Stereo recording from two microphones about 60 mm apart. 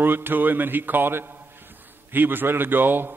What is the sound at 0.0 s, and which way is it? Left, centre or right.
A man's voice, right.